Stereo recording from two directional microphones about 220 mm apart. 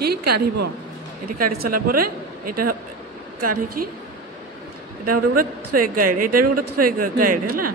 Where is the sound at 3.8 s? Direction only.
90° right.